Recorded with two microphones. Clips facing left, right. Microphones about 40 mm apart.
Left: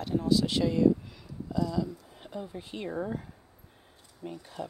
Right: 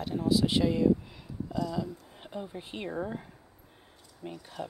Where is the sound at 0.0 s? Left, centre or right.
Centre.